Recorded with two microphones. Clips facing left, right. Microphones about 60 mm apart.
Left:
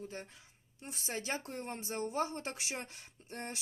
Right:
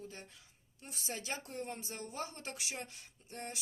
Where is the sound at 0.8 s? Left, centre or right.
Left.